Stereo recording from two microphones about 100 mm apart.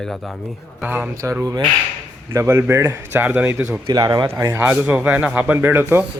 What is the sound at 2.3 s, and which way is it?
Speech, 25° right (ahead or behind).